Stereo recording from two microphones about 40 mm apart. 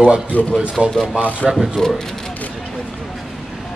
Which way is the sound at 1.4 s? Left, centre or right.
Left.